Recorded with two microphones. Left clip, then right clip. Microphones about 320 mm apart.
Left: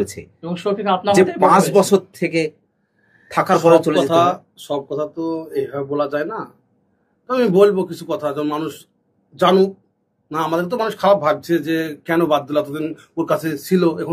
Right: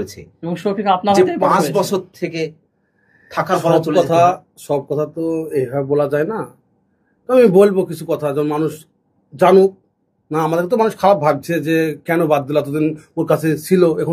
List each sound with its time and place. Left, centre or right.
0.0 s speech: left
0.4 s speech: right
1.8 s speech: left
3.9 s speech: right